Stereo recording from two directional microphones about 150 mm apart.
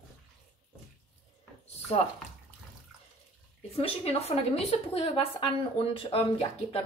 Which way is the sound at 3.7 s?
40° left (ahead or behind).